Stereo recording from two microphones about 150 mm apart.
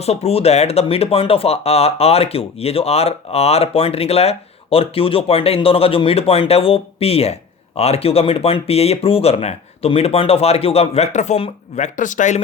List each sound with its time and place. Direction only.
0.0 s speech: 45° left (ahead or behind)
11.8 s speech: 60° left (ahead or behind)